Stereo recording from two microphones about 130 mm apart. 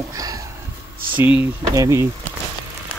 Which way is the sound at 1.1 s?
15° right (ahead or behind).